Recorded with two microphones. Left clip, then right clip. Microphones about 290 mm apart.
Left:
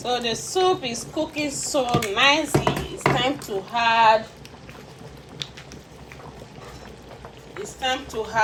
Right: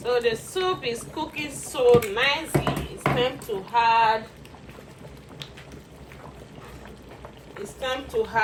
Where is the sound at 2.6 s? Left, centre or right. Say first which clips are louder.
Left 4 dB; left.